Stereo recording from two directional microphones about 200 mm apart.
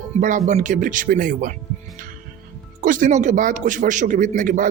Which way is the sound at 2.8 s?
40° right (ahead or behind).